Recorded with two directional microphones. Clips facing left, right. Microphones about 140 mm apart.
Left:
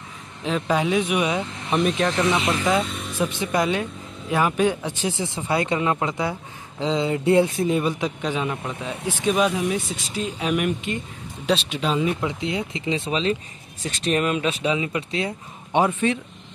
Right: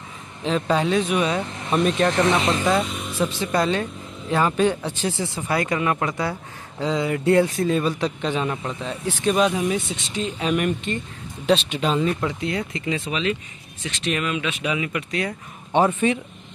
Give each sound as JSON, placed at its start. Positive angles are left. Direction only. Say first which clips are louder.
{"t": 0.4, "sound": "speech", "louder": "right 1 dB", "side_deg": 5}
{"t": 2.8, "sound": "a sound", "louder": "right 1 dB", "side_deg": 0}
{"t": 3.2, "sound": "speech", "louder": "right 1 dB", "side_deg": 15}
{"t": 8.2, "sound": "speech", "louder": "right 1 dB", "side_deg": 5}
{"t": 12.2, "sound": "speech", "louder": "even", "side_deg": 20}
{"t": 16.0, "sound": "speech", "louder": "right 1 dB", "side_deg": -5}